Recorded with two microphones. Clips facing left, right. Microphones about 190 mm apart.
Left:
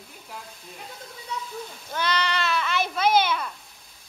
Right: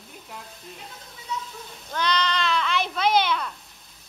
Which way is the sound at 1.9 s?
10° left (ahead or behind).